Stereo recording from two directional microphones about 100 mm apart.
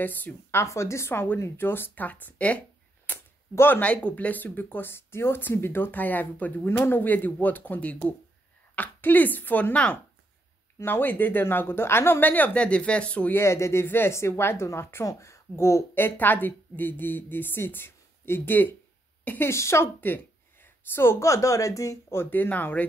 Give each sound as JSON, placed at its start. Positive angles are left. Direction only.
{"t": 0.0, "sound": "speech", "side_deg": 20}
{"t": 13.4, "sound": "speech", "side_deg": 30}